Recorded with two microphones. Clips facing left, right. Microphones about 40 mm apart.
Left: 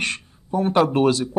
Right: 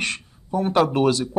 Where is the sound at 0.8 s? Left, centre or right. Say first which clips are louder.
Left 1 dB; left.